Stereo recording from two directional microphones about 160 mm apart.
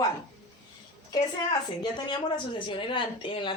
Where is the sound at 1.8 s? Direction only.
30° left (ahead or behind).